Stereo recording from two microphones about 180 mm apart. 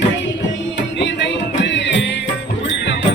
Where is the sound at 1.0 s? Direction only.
75° left (ahead or behind).